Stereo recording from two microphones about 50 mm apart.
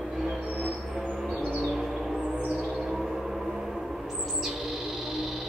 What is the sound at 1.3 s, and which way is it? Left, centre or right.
Bird, right.